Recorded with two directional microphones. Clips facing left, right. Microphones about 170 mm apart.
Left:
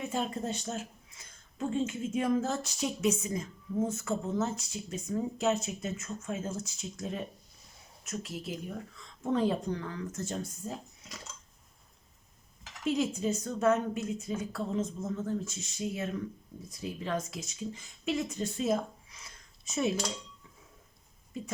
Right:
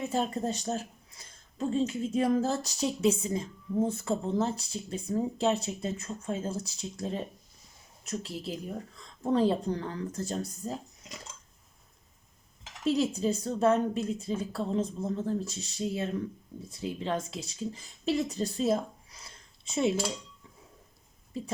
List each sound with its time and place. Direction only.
0.1 s speech: 40° right (ahead or behind)
12.8 s speech: 35° right (ahead or behind)